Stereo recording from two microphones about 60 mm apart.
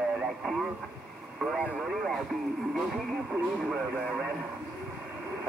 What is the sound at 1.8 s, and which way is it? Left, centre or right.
Radio, centre.